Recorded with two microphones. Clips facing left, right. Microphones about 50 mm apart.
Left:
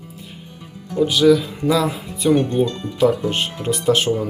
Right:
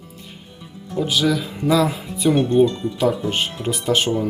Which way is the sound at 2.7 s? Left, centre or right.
Left.